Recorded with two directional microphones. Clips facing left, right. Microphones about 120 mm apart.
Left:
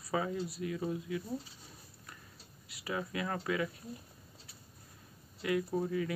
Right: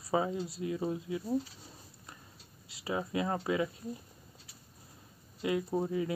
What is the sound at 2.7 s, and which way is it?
Speech, 25° right (ahead or behind).